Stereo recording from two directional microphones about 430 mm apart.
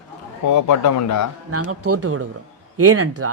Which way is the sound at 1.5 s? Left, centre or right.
Right.